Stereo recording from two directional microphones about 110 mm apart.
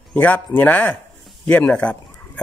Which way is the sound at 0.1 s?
15° left (ahead or behind).